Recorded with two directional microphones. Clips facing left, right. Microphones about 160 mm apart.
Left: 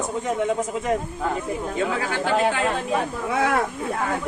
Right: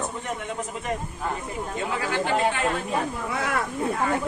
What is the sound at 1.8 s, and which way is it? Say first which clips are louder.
Speech: left 5 dB; 90° left.